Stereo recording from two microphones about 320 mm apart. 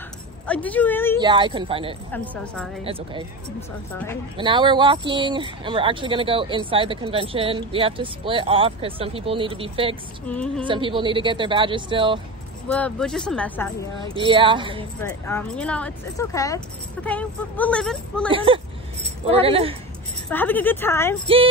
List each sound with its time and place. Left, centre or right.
0.5 s speech: centre
1.1 s speech: centre
2.1 s speech: centre
2.8 s speech: centre
4.4 s speech: centre
10.2 s speech: centre
10.6 s speech: centre
12.6 s speech: centre
14.0 s speech: centre
15.2 s speech: centre
18.3 s speech: centre
20.2 s speech: centre